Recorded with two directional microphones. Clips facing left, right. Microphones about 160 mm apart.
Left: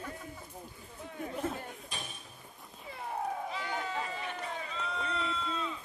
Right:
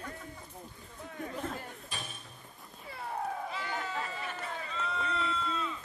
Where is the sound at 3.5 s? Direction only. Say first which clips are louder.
Left 1 dB; centre (ahead or behind).